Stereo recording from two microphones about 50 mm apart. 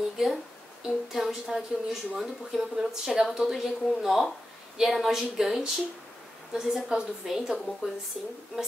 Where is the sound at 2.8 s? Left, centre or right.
Centre.